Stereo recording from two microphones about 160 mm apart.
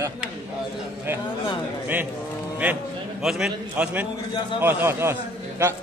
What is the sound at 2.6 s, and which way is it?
A man's voice, 5° right (ahead or behind).